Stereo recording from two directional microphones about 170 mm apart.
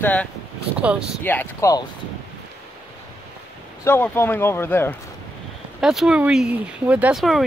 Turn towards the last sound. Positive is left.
turn(degrees=0)  # may be behind; listen again after turning